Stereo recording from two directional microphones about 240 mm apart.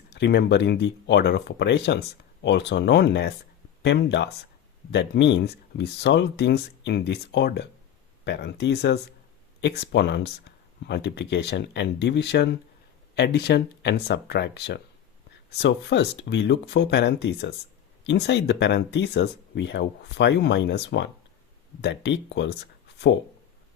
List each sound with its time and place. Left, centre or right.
0.1 s speech: left